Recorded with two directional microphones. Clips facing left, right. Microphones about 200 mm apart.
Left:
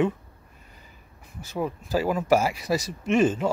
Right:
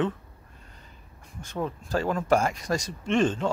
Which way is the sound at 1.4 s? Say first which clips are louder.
Left 2 dB; 5° left (ahead or behind).